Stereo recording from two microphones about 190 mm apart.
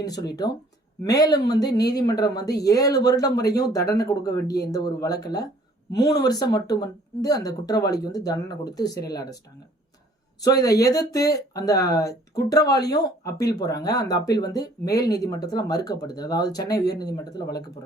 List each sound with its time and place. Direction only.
0.0 s a woman's voice: 20° left (ahead or behind)
10.4 s a woman's voice: 20° left (ahead or behind)